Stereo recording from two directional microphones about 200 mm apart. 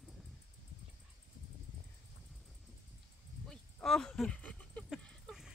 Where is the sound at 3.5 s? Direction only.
5° left (ahead or behind).